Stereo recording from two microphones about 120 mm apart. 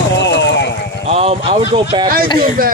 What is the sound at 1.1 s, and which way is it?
Speech, 55° right (ahead or behind).